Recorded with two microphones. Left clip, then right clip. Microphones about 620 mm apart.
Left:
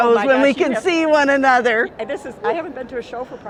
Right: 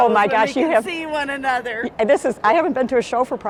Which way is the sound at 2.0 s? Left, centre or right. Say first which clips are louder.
Right 9 dB; right.